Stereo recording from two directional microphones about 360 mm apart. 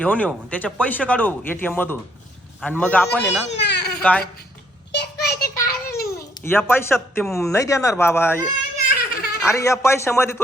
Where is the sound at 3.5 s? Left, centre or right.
Left.